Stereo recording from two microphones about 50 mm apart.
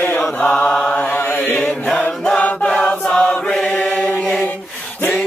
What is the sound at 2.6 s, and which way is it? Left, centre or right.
Choir, centre.